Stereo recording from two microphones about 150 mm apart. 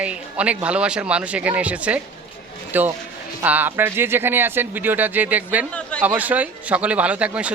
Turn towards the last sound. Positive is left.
turn(degrees=-10)  # may be behind; listen again after turning